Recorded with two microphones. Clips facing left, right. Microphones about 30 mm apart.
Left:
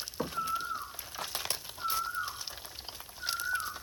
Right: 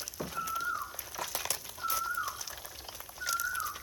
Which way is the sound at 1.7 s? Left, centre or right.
Centre.